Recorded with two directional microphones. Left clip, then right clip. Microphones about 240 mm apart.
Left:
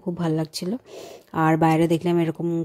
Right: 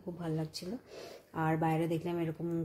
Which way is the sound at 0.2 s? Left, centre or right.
Left.